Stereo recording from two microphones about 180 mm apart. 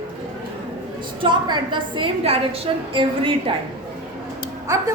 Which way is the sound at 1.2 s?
25° right (ahead or behind).